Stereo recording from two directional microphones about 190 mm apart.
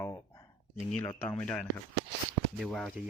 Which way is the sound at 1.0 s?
5° left (ahead or behind).